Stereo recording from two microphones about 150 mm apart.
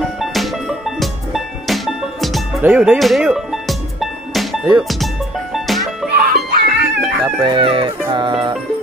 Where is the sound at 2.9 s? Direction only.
Centre (ahead or behind).